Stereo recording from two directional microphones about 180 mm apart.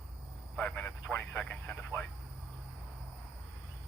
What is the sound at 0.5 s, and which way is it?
Speech, 5° left (ahead or behind).